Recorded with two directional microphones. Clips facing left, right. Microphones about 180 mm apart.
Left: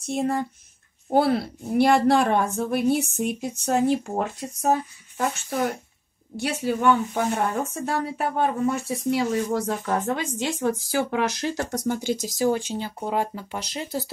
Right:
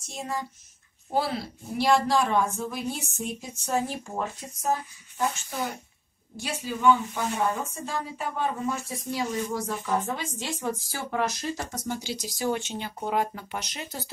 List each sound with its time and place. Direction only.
0.0 s a woman's voice: 60° left (ahead or behind)
6.4 s a woman's voice: 60° left (ahead or behind)
12.3 s speech: 40° left (ahead or behind)